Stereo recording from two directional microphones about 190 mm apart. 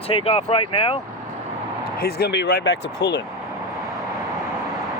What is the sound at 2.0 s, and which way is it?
Speech, 55° left (ahead or behind).